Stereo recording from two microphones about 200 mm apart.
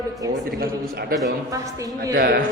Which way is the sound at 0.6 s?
50° right (ahead or behind).